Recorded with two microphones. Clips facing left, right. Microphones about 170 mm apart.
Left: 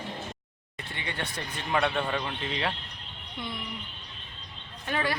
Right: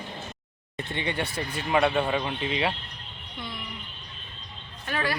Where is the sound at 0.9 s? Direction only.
20° right (ahead or behind).